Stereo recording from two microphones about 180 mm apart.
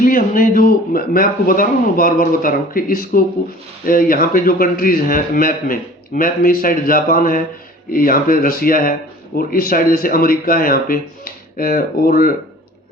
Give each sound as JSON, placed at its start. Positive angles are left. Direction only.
{"t": 0.0, "sound": "a man's voice", "side_deg": 50}